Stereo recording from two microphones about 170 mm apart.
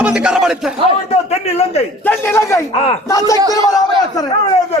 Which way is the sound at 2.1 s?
15° left (ahead or behind).